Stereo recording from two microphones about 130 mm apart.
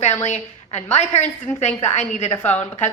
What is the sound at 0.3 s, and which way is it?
A woman's voice, 60° left (ahead or behind).